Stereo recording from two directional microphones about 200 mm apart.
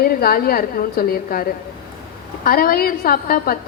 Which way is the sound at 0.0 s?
50° left (ahead or behind).